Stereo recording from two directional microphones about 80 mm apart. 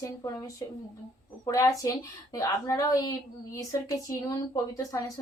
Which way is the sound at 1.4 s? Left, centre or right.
Left.